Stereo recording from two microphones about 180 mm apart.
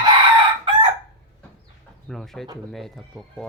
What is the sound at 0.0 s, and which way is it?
Crowing, 25° right (ahead or behind).